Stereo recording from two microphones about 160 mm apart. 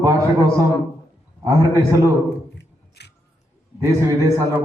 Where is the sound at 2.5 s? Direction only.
90° left.